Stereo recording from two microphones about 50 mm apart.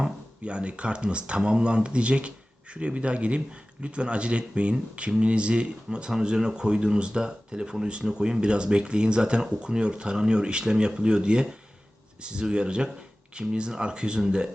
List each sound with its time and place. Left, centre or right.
0.4 s speech: right